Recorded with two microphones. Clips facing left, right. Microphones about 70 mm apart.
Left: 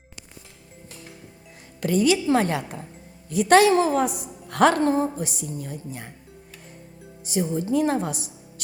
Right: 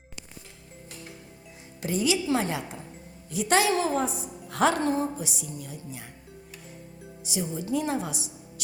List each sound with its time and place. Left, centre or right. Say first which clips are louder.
1.8 s a woman's voice: left 6 dB; left
3.9 s a woman's voice: left 5 dB; left
4.8 s a woman's voice: left 5 dB; left
7.3 s a woman's voice: left 6 dB; left